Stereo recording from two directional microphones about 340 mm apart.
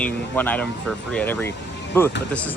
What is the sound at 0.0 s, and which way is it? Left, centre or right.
Speech, centre.